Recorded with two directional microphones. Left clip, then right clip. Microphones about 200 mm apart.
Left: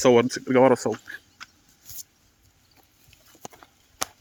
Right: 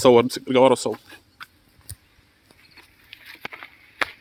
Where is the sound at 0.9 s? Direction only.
45° right (ahead or behind).